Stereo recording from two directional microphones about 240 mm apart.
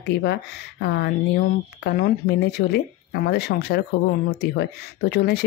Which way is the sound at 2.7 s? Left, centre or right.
Left.